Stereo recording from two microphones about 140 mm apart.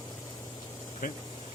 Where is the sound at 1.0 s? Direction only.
80° left.